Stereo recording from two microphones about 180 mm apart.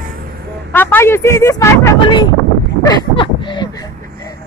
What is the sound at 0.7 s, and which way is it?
Speech, 10° left (ahead or behind).